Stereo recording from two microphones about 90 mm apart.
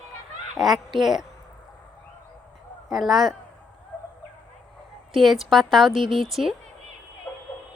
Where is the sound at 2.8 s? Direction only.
Centre (ahead or behind).